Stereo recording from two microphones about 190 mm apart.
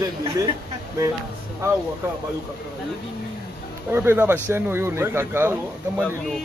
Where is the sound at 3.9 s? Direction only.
10° right (ahead or behind).